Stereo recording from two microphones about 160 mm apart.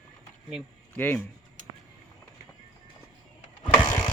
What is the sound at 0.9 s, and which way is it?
Speech, 10° left (ahead or behind).